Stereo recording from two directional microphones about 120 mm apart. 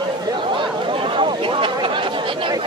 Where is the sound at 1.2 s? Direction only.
45° right (ahead or behind).